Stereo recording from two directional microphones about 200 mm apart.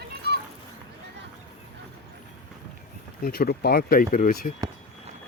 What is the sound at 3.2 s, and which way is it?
Speech, 50° left (ahead or behind).